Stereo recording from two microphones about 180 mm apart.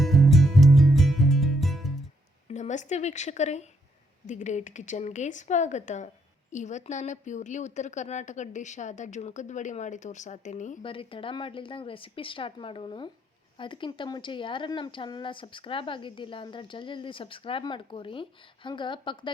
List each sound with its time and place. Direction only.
0.0 s music: centre (ahead or behind)
2.5 s a woman's voice: 40° left (ahead or behind)
10.8 s a woman's voice: 30° left (ahead or behind)